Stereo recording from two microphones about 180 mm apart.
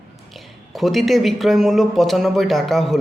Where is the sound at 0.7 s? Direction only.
Centre (ahead or behind).